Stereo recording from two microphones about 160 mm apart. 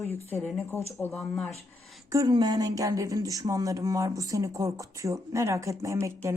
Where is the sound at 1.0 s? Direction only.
5° left (ahead or behind).